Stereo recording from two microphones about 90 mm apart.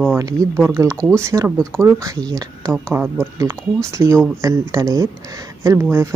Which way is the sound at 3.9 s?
35° right (ahead or behind).